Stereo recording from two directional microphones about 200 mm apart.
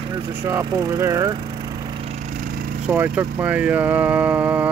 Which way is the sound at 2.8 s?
10° right (ahead or behind).